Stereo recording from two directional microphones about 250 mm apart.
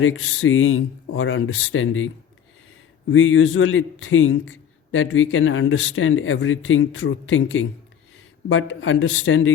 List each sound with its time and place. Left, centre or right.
0.0 s a man's voice: left
3.1 s a man's voice: left